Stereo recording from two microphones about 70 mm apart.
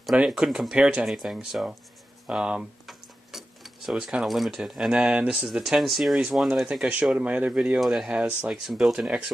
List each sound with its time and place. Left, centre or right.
0.1 s speech: centre
0.7 s speech: centre
1.0 s speech: centre
5.5 s speech: centre
7.2 s speech: centre
7.8 s speech: centre